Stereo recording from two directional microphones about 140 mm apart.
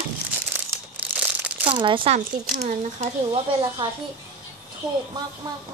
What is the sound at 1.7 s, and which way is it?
Speech, 35° right (ahead or behind).